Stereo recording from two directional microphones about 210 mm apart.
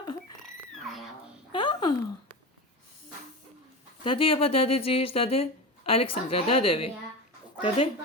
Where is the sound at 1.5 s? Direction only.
20° left (ahead or behind).